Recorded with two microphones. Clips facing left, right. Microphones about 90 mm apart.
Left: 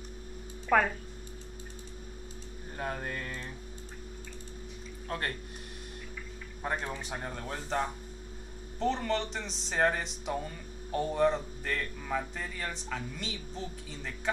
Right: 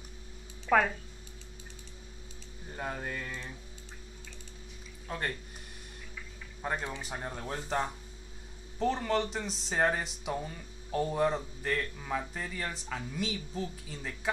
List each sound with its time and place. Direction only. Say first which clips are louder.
0.7 s speech: even; 5° left (ahead or behind)
2.8 s speech: left 1 dB; 5° right (ahead or behind)
5.0 s speech: left 1 dB; 5° right (ahead or behind)
6.6 s speech: even; centre (ahead or behind)